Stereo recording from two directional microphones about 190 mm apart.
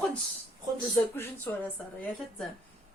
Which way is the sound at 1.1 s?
10° left (ahead or behind).